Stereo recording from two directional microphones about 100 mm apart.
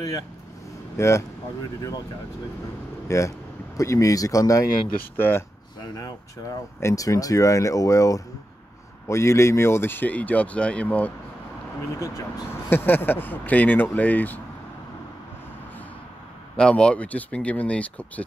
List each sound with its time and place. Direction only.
0.9 s speech: 30° left (ahead or behind)
3.1 s speech: 30° left (ahead or behind)
5.1 s speech: 20° left (ahead or behind)
5.9 s speech: 40° left (ahead or behind); by 11.1 s 15° left (ahead or behind)
12.0 s speech: 35° left (ahead or behind)
12.6 s speech: 20° left (ahead or behind)
16.5 s speech: 10° left (ahead or behind)